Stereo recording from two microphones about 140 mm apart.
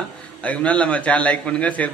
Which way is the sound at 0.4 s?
10° left (ahead or behind).